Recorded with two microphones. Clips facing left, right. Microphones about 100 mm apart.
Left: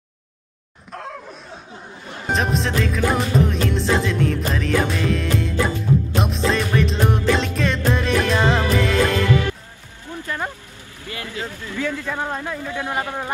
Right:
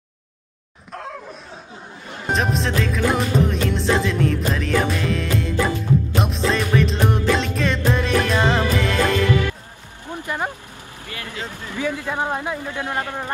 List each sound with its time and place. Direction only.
0.9 s a sound: centre (ahead or behind)
2.3 s music: centre (ahead or behind)
10.0 s music: 20° right (ahead or behind)
11.4 s speech: 20° right (ahead or behind)
12.8 s speech: 20° left (ahead or behind)